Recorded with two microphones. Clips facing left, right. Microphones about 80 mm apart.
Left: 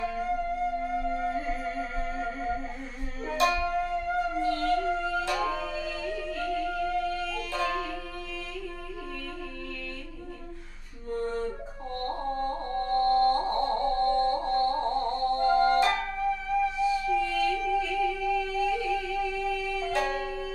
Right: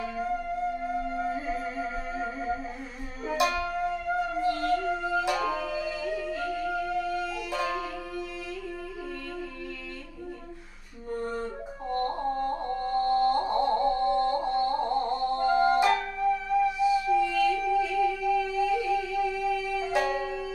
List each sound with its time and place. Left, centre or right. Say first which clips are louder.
0.0 s music: left 1 dB; centre
11.1 s music: left 2 dB; centre